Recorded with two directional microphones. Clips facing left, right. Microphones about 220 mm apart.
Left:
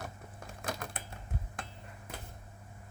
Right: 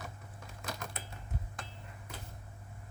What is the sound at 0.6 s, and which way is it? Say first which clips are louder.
Typing: left 3 dB; 55° left (ahead or behind).